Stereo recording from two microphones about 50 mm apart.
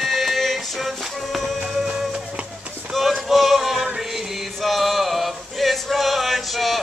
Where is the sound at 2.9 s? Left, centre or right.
Centre.